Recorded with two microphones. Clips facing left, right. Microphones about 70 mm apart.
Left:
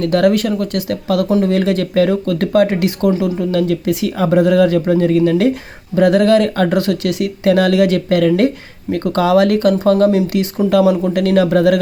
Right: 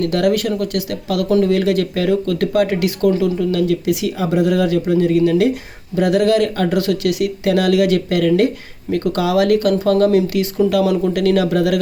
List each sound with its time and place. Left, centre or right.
0.0 s speech: left
3.3 s speech: left